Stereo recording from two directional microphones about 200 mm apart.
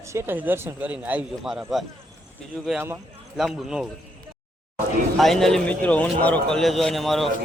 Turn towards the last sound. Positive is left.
turn(degrees=0)  # may be behind; listen again after turning